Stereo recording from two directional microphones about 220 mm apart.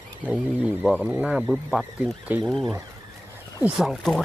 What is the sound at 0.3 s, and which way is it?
Speech, 5° right (ahead or behind).